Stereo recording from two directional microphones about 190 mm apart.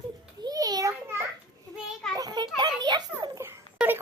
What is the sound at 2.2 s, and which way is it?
Children playing, 20° right (ahead or behind).